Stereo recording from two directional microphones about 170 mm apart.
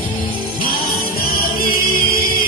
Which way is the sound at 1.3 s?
60° left (ahead or behind).